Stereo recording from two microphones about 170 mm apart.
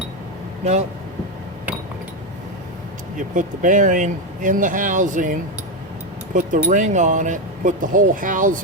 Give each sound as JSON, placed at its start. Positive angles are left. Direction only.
{"t": 0.6, "sound": "speech", "side_deg": -40}
{"t": 3.2, "sound": "speech", "side_deg": -50}